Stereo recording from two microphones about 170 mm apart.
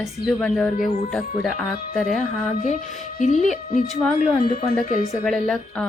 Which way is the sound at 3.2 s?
45° left (ahead or behind).